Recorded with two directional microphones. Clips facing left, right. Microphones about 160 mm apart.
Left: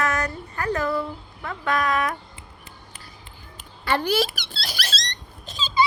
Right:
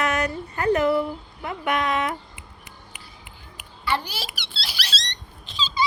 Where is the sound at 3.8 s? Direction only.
50° left (ahead or behind).